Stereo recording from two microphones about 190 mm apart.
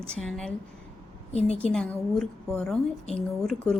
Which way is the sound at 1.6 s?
5° left (ahead or behind).